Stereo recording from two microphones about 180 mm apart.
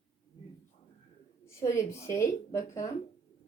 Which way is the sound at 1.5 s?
15° left (ahead or behind).